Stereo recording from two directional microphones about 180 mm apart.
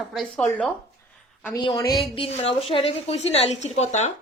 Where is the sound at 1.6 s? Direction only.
20° left (ahead or behind).